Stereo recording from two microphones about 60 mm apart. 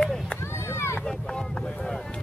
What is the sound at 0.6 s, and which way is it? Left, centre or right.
Vehicle, left.